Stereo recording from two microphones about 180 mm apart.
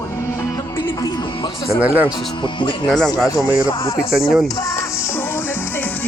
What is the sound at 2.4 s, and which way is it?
Speech, 25° left (ahead or behind).